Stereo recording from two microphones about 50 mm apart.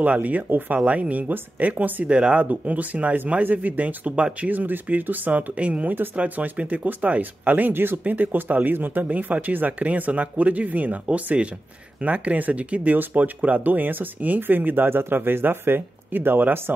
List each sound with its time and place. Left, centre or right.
0.0 s speech: right